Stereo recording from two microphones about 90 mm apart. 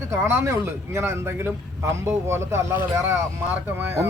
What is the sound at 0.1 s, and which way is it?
A man's voice, 30° right (ahead or behind).